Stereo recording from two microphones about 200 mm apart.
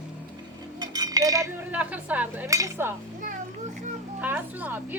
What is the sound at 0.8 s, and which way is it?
Speech, 20° right (ahead or behind).